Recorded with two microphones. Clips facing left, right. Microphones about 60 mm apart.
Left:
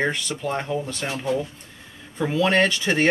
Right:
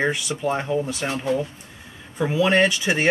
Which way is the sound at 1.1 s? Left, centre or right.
Right.